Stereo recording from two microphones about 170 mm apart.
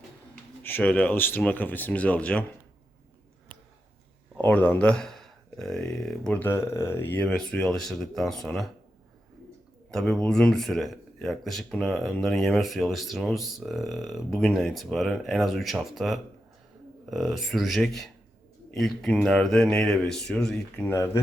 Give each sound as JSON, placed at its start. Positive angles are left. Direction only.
{"t": 0.6, "sound": "speech", "side_deg": 10}
{"t": 4.4, "sound": "speech", "side_deg": 10}
{"t": 9.9, "sound": "speech", "side_deg": 5}
{"t": 20.9, "sound": "speech", "side_deg": 15}